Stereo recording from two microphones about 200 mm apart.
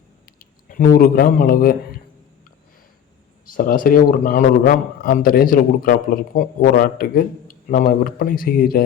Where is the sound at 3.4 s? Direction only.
45° left (ahead or behind).